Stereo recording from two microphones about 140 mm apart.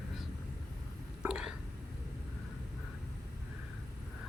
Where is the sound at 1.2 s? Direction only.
5° right (ahead or behind).